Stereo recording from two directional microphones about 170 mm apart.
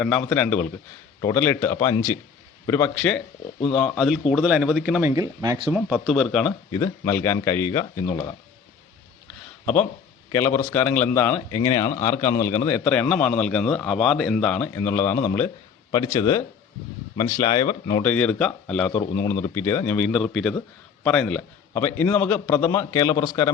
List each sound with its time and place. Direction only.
0.0 s a man's voice: 5° left (ahead or behind)
5.0 s speech: 20° right (ahead or behind)
5.7 s a man's voice: 5° right (ahead or behind)
6.7 s speech: 20° left (ahead or behind)
9.2 s a sound: 5° left (ahead or behind)
10.3 s a man's voice: 15° left (ahead or behind)
16.1 s speech: 20° left (ahead or behind)
18.0 s a man's voice: 10° left (ahead or behind)
21.7 s speech: 15° left (ahead or behind)